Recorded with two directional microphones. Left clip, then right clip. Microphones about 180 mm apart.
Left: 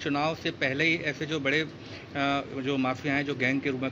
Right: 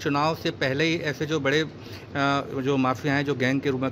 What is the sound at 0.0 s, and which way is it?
A man's voice, 40° right (ahead or behind).